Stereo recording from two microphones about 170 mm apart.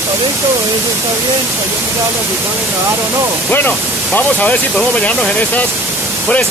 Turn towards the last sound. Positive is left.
turn(degrees=10)  # may be behind; listen again after turning